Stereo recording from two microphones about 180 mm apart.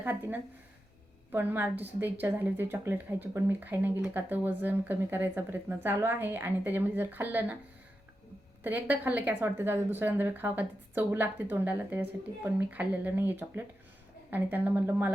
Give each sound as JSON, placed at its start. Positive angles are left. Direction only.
{"t": 0.0, "sound": "a woman's voice", "side_deg": -10}
{"t": 8.6, "sound": "a woman's voice", "side_deg": -10}